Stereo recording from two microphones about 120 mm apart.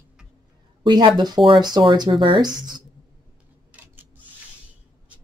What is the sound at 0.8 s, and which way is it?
Speech, 40° right (ahead or behind).